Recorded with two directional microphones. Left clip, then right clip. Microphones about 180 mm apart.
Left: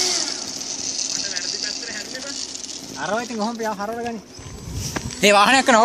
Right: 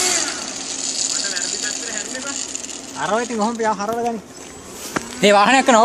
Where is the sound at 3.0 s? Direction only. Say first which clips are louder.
Right 4 dB; 40° left (ahead or behind).